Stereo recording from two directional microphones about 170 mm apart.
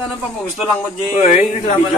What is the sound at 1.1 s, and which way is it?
Speech, 40° left (ahead or behind).